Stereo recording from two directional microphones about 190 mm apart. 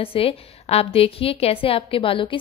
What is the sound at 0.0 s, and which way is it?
A woman's voice, 30° left (ahead or behind).